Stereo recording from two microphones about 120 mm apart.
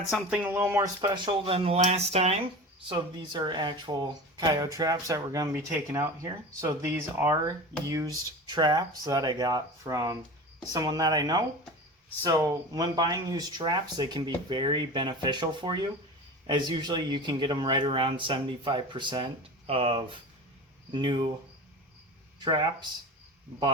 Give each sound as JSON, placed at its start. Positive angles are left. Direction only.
{"t": 0.3, "sound": "speech", "side_deg": -20}
{"t": 1.0, "sound": "speech", "side_deg": -40}
{"t": 2.9, "sound": "speech", "side_deg": -40}
{"t": 20.9, "sound": "speech", "side_deg": -40}
{"t": 22.4, "sound": "speech", "side_deg": -40}